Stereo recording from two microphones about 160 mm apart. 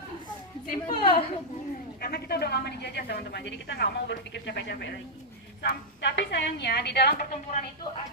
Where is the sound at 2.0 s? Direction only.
80° left.